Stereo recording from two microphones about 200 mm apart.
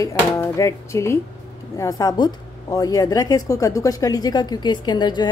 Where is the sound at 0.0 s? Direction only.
15° left (ahead or behind).